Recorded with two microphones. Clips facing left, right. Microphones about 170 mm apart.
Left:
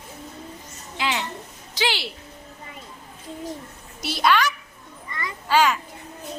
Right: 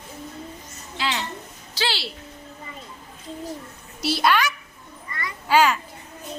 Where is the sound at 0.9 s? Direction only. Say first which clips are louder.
Left 1 dB; 15° left (ahead or behind).